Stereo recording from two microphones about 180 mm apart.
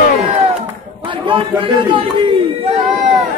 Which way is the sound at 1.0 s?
30° right (ahead or behind).